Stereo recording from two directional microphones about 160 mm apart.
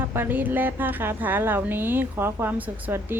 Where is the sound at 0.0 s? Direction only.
15° right (ahead or behind).